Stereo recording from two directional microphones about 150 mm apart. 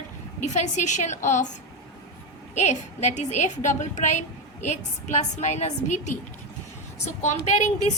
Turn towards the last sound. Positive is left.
turn(degrees=50)  # may be behind; listen again after turning